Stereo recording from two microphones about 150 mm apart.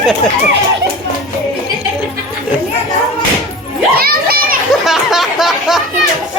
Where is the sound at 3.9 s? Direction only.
85° right.